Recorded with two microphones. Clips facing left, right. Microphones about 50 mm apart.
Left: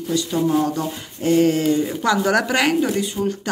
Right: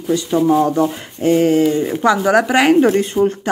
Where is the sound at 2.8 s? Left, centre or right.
Right.